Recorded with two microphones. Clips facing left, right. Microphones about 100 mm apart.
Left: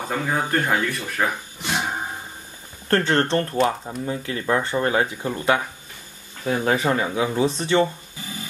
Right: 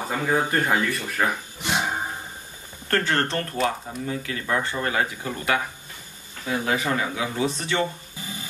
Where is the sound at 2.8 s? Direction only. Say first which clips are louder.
Left 4 dB; 30° left (ahead or behind).